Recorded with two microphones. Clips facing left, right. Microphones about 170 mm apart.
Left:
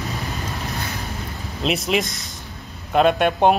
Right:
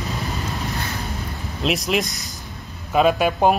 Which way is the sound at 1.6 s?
Centre (ahead or behind).